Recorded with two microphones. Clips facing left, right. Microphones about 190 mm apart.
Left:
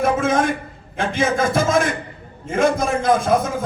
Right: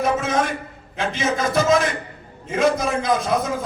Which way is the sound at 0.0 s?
50° left (ahead or behind).